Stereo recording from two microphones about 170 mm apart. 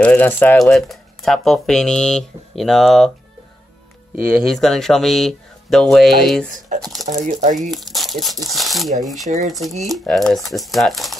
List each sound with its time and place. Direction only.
0.0 s speech: 10° left (ahead or behind)
4.2 s speech: 5° right (ahead or behind)
7.2 s speech: 50° right (ahead or behind)
7.6 s speech: centre (ahead or behind)